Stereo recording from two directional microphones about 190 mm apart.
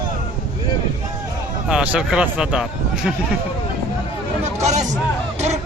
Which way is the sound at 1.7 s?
5° right (ahead or behind).